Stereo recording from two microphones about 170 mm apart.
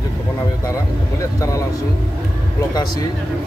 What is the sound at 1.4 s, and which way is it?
Speech, 20° left (ahead or behind).